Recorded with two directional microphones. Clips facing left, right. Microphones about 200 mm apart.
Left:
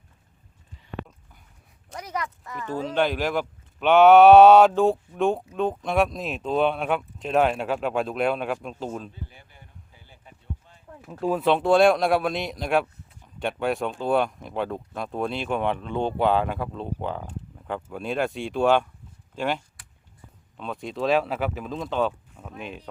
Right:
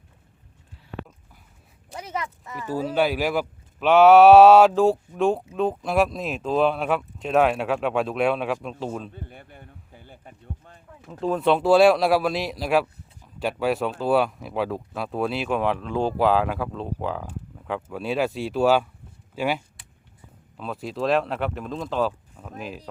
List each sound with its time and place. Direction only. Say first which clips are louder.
2.0 s speech: even; 25° right (ahead or behind)
2.6 s speech: right 2 dB; 10° right (ahead or behind)
9.1 s a sound: right 3 dB; 55° right (ahead or behind)
11.0 s speech: right 1 dB; 10° left (ahead or behind)